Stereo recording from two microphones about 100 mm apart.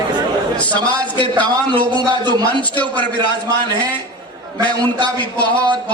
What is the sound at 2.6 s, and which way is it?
Speech, 15° left (ahead or behind).